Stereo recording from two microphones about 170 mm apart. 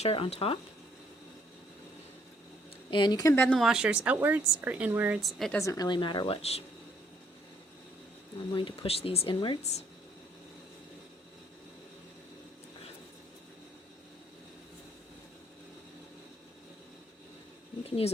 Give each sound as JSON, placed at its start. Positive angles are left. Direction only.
{"t": 0.0, "sound": "speech", "side_deg": 35}
{"t": 2.9, "sound": "speech", "side_deg": 25}
{"t": 3.5, "sound": "speech", "side_deg": 0}
{"t": 5.5, "sound": "speech", "side_deg": 20}
{"t": 8.5, "sound": "speech", "side_deg": 30}
{"t": 17.8, "sound": "speech", "side_deg": 35}